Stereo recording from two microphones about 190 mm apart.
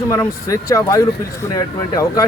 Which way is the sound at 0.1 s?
15° left (ahead or behind).